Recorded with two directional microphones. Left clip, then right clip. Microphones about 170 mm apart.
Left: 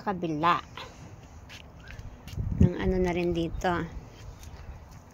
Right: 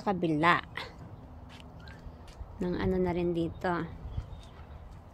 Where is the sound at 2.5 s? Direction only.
5° left (ahead or behind).